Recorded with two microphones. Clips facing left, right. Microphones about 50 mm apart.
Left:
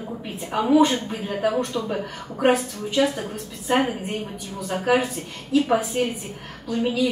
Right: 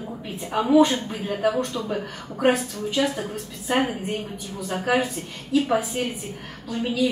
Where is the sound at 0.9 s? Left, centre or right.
Centre.